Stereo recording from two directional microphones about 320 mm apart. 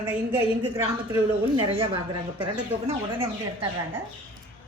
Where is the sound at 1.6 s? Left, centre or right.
Centre.